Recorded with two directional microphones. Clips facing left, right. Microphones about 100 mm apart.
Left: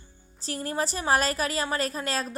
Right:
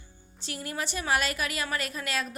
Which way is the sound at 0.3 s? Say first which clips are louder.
Left 5 dB; 35° left (ahead or behind).